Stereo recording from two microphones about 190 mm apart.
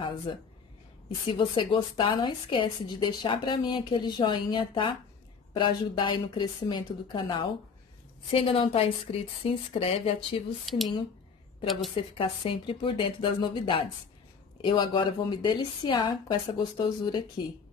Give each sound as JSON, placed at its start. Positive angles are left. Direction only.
{"t": 0.3, "sound": "a woman's voice", "side_deg": 25}
{"t": 10.6, "sound": "speech", "side_deg": 0}
{"t": 11.9, "sound": "a woman's voice", "side_deg": 30}